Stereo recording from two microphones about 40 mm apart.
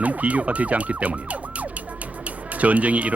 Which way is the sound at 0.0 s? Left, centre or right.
Right.